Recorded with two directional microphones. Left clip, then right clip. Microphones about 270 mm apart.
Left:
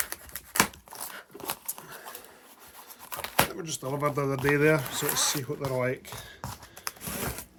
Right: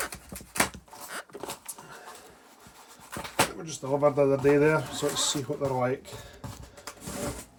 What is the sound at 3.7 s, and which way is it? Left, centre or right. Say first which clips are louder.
Speech: right 5 dB; left.